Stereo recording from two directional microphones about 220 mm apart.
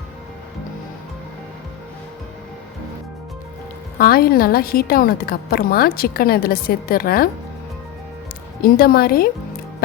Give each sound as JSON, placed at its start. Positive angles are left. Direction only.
{"t": 3.9, "sound": "a woman's voice", "side_deg": 40}
{"t": 8.6, "sound": "a woman's voice", "side_deg": 40}